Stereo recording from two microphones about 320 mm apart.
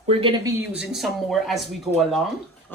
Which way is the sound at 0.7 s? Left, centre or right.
Centre.